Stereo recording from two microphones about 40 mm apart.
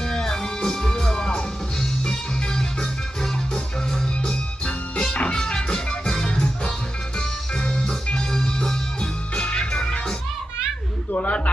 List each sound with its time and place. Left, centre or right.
0.0 s music: centre
4.3 s music: left
9.0 s music: left
11.1 s music: left